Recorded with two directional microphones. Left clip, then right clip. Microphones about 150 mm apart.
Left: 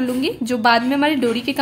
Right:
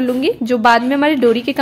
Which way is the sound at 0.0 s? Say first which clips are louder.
Right 5 dB; 25° right (ahead or behind).